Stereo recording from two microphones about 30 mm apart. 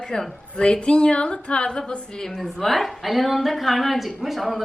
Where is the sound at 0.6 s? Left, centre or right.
Left.